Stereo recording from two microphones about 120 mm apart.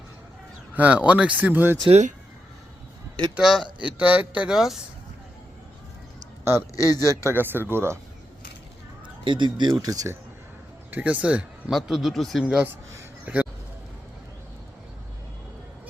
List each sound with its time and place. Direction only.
0.8 s speech: 10° right (ahead or behind)
1.9 s speech: 80° right
3.3 s a man's voice: 5° right (ahead or behind)
6.4 s a man's voice: 20° right (ahead or behind)
6.7 s speech: 30° left (ahead or behind)
7.3 s speech: 20° right (ahead or behind)
9.0 s speech: 40° right (ahead or behind)
10.9 s a man's voice: 10° right (ahead or behind)
13.2 s a sound: 10° right (ahead or behind)